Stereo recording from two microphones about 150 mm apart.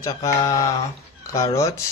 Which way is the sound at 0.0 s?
25° left (ahead or behind).